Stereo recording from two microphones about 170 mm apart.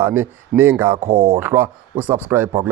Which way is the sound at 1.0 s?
55° right (ahead or behind).